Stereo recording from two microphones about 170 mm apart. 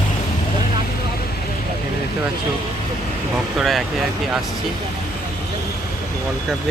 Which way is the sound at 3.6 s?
Centre (ahead or behind).